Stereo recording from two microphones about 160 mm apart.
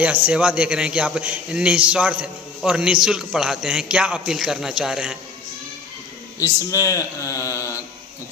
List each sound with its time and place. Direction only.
0.0 s a man's voice: 10° right (ahead or behind)
6.4 s speech: 20° left (ahead or behind)